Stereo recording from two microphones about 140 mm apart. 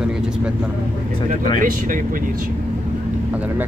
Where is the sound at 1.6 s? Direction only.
75° right (ahead or behind).